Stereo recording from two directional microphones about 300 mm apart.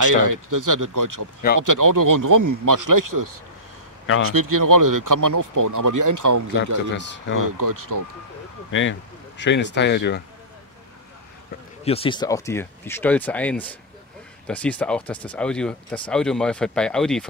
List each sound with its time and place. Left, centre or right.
0.0 s speech: right
6.9 s speech: left
7.3 s speech: right
9.4 s speech: left
11.8 s speech: centre